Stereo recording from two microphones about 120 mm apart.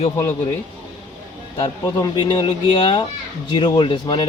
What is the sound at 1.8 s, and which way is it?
Speech, 35° left (ahead or behind).